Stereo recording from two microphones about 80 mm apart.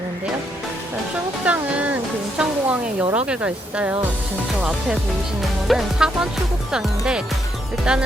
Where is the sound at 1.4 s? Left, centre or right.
Centre.